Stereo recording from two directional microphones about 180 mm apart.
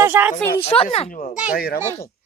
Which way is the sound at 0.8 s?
35° left (ahead or behind).